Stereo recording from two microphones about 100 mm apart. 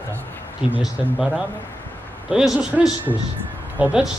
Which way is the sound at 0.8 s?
5° right (ahead or behind).